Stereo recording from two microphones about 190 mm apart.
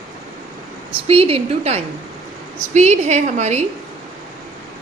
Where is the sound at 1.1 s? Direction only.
30° right (ahead or behind).